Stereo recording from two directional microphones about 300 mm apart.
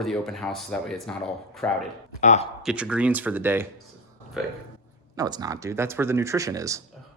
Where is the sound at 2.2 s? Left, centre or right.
Left.